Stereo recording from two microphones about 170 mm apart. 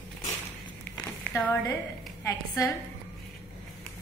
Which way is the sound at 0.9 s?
15° left (ahead or behind).